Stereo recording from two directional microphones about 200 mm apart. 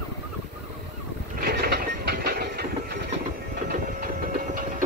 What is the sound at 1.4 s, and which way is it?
Train, 55° right (ahead or behind).